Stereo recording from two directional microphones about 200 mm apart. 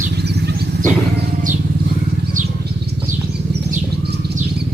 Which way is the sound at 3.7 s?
55° right (ahead or behind).